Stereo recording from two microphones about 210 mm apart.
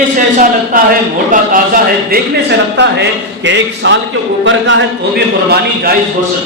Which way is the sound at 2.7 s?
55° right (ahead or behind).